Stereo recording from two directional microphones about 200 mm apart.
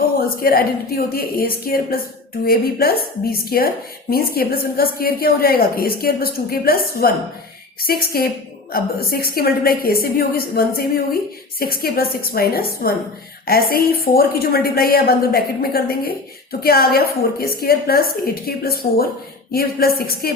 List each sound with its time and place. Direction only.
0.4 s a woman's voice: 50° left (ahead or behind)